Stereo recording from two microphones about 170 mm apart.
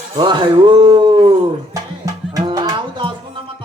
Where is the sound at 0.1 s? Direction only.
25° right (ahead or behind).